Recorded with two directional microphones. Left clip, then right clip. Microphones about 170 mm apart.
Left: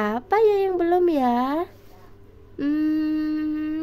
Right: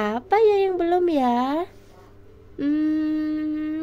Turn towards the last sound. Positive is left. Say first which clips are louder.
# even
turn(degrees=10)  # may be behind; listen again after turning